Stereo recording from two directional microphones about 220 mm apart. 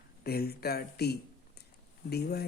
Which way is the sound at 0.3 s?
45° left (ahead or behind).